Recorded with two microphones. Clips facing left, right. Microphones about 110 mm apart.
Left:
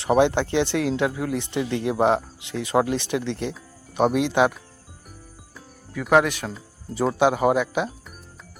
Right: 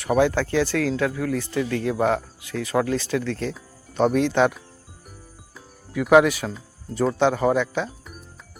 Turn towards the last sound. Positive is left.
turn(degrees=10)  # may be behind; listen again after turning